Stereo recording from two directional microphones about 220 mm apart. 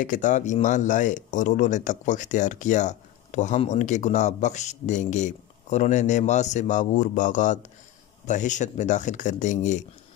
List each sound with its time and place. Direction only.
0.0 s speech: 35° left (ahead or behind)